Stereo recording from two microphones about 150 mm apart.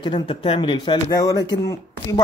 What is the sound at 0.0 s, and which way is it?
Speech, 35° left (ahead or behind).